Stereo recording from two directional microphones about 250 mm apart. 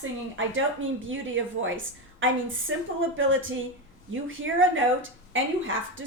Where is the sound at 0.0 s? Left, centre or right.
Right.